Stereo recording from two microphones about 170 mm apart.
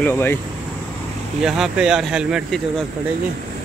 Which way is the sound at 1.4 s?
5° right (ahead or behind).